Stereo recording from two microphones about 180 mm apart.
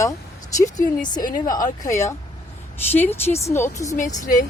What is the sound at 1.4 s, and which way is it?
Speech, 20° left (ahead or behind).